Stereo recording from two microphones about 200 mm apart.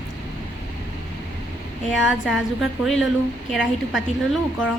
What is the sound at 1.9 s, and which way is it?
Speech, 5° right (ahead or behind).